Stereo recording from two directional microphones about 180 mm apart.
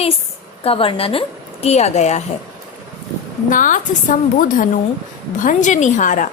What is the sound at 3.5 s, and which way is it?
Speech, 45° left (ahead or behind).